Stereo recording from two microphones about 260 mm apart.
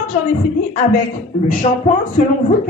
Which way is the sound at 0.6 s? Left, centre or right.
Left.